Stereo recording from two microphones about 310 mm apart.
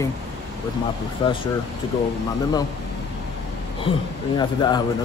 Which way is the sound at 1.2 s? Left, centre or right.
Centre.